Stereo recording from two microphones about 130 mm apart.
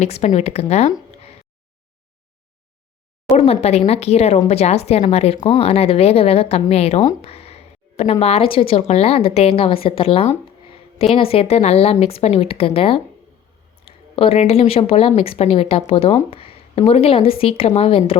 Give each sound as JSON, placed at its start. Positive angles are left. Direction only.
{"t": 0.0, "sound": "speech", "side_deg": 60}
{"t": 3.3, "sound": "a woman's voice", "side_deg": 50}